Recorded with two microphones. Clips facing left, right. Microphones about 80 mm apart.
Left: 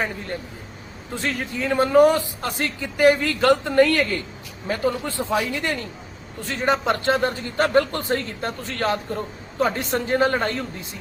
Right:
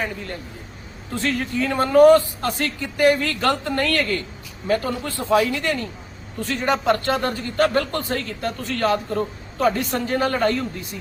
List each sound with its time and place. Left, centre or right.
1.1 s a man's voice: centre